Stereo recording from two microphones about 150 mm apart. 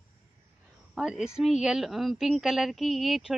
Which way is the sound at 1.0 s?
5° right (ahead or behind).